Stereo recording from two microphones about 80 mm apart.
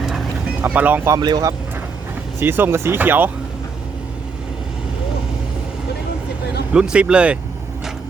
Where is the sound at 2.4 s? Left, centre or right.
Right.